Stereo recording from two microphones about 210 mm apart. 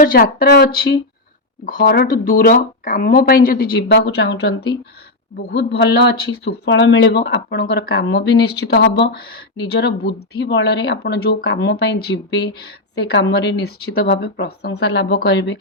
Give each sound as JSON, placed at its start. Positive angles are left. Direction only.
{"t": 0.0, "sound": "speech", "side_deg": 45}
{"t": 3.8, "sound": "speech", "side_deg": 55}